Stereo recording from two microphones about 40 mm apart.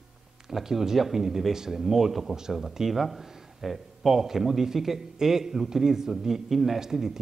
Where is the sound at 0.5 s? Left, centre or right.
Centre.